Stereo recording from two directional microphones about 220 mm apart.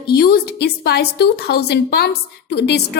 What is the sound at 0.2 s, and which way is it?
Speech, 45° left (ahead or behind).